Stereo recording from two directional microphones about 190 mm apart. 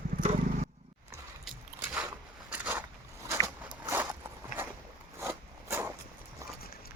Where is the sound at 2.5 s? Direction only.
10° right (ahead or behind).